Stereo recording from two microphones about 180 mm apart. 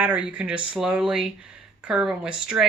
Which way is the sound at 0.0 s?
5° right (ahead or behind).